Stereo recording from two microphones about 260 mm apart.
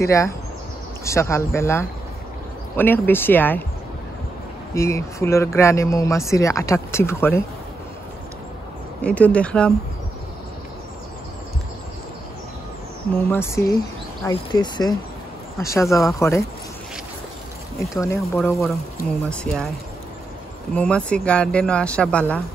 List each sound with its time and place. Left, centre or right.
0.0 s speech: centre
4.7 s speech: centre
9.0 s speech: centre
13.3 s speech: centre
18.0 s speech: centre
20.7 s speech: centre